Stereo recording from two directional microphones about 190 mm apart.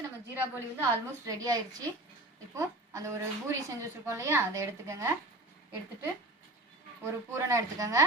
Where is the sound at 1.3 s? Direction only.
20° right (ahead or behind).